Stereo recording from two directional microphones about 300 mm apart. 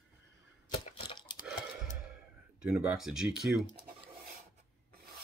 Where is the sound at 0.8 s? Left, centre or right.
Centre.